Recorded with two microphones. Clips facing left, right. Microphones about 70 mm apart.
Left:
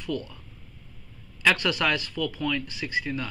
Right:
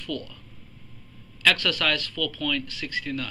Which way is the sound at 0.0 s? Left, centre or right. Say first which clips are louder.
Left 2 dB; centre.